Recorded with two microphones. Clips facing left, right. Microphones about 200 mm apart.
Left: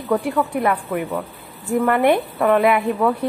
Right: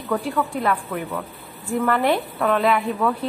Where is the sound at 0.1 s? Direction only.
20° left (ahead or behind).